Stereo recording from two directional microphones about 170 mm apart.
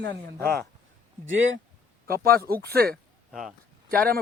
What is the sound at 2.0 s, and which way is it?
Speech, 60° right (ahead or behind).